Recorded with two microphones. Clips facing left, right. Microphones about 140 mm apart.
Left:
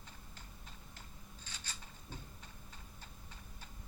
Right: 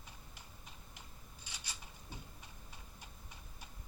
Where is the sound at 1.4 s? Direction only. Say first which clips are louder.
Even; 10° right (ahead or behind).